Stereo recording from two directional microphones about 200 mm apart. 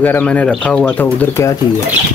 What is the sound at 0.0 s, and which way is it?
Speech, 10° left (ahead or behind).